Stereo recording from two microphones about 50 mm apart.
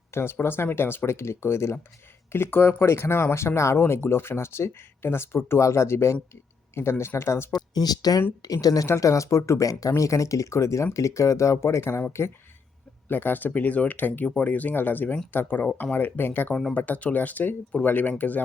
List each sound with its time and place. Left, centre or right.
0.1 s speech: left
2.3 s speech: left
8.5 s speech: left
11.8 s speech: left
13.1 s speech: left
16.0 s speech: left